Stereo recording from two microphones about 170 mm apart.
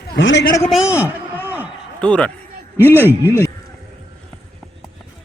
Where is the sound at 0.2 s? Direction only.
90° left.